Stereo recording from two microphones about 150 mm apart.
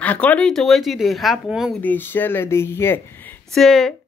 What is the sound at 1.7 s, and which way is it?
Speech, 10° left (ahead or behind).